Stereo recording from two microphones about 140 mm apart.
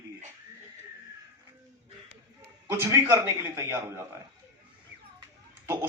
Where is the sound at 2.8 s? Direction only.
20° right (ahead or behind).